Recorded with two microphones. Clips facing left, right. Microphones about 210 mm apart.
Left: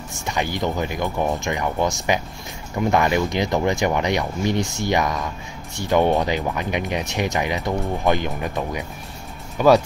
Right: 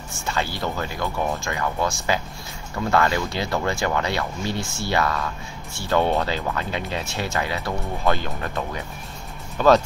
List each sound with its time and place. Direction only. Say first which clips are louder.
0.2 s speech: left 3 dB; 15° left (ahead or behind)